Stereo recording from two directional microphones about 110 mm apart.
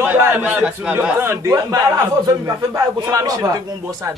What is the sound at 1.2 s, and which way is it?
A man's voice, 25° right (ahead or behind).